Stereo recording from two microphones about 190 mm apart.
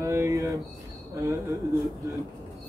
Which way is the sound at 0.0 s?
15° right (ahead or behind).